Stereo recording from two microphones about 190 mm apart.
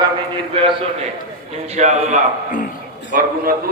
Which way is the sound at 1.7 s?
40° right (ahead or behind).